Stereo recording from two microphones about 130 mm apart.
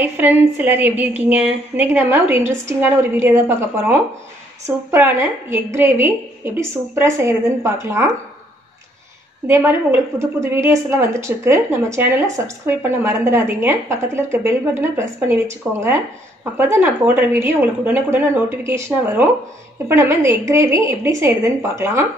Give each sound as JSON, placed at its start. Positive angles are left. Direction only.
{"t": 0.0, "sound": "a woman's voice", "side_deg": -15}
{"t": 9.5, "sound": "a woman's voice", "side_deg": -20}